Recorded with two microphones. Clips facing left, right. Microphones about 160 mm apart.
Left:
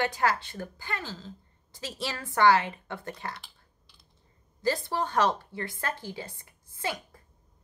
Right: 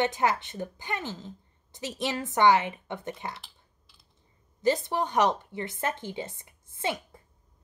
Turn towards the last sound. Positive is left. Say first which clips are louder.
# right 2 dB
turn(degrees=-25)  # may be behind; listen again after turning